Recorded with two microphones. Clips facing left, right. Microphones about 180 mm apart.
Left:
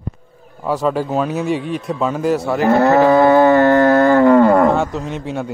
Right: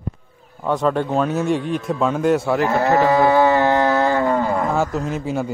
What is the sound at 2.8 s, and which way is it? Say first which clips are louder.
Cattle: left 5 dB; 60° left (ahead or behind).